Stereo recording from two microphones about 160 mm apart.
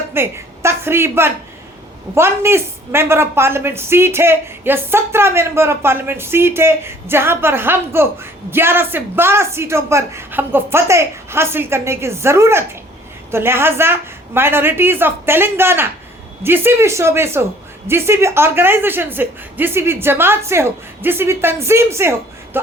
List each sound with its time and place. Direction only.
0.1 s a woman's voice: 15° right (ahead or behind)